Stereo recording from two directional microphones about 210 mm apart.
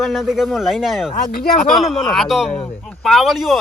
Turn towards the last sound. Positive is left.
turn(degrees=0)  # may be behind; listen again after turning